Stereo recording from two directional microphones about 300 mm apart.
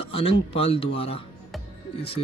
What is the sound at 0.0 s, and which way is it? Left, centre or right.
Speech, centre.